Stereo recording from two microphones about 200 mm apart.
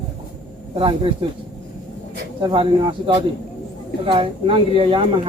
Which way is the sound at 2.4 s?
25° right (ahead or behind).